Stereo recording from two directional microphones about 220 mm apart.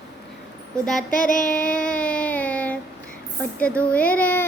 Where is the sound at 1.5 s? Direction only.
5° left (ahead or behind).